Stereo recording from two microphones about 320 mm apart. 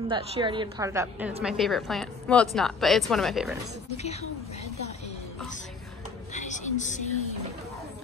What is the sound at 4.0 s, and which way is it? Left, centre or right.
Speech, centre.